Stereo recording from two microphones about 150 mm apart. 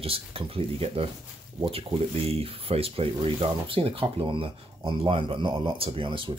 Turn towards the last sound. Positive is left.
turn(degrees=-35)  # may be behind; listen again after turning